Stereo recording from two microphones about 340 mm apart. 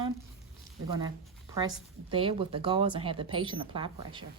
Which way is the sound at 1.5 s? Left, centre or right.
Centre.